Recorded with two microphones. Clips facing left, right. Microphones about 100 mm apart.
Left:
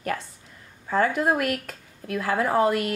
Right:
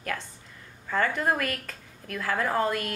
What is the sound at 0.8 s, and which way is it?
Speech, 20° left (ahead or behind).